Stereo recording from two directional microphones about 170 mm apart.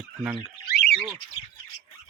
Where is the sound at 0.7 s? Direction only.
75° left (ahead or behind).